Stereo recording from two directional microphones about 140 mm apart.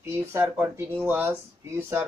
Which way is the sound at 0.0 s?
15° right (ahead or behind).